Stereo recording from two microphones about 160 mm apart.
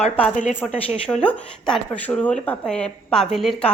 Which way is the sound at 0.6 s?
5° left (ahead or behind).